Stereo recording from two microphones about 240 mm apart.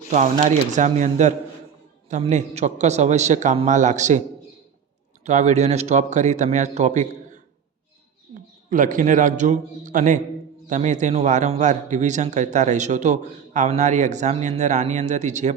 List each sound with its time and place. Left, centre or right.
0.1 s a man's voice: right
5.2 s speech: right
8.7 s a man's voice: right